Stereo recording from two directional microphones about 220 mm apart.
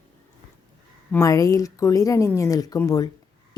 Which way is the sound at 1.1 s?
15° left (ahead or behind).